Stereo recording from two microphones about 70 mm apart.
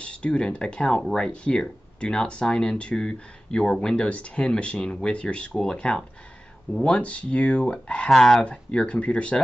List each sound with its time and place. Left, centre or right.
0.0 s speech: centre